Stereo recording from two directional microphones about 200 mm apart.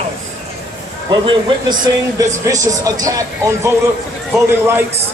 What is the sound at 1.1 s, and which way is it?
A man's voice, 25° right (ahead or behind).